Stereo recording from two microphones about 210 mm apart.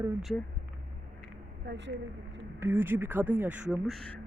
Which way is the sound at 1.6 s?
55° right (ahead or behind).